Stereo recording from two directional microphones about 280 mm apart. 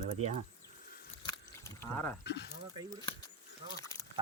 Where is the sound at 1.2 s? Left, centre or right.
Centre.